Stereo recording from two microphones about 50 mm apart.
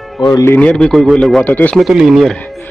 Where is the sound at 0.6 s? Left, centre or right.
Centre.